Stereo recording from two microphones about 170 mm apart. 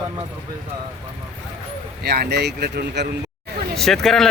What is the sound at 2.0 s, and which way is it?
Speech, 70° right (ahead or behind).